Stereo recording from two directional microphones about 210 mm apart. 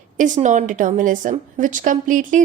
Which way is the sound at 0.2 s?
35° right (ahead or behind).